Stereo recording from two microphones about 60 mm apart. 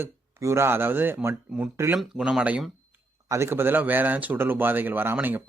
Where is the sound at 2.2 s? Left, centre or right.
Centre.